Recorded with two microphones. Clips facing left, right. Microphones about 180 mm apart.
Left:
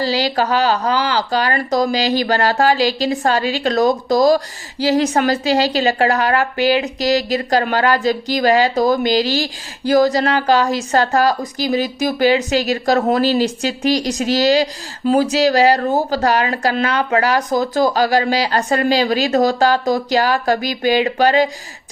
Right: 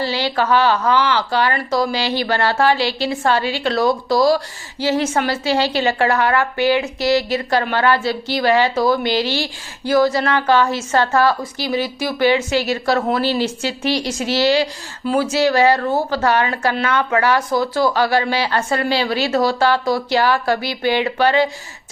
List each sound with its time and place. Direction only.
0.0 s a woman's voice: 40° left (ahead or behind)